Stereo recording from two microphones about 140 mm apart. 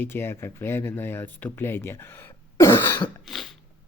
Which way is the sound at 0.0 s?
15° left (ahead or behind).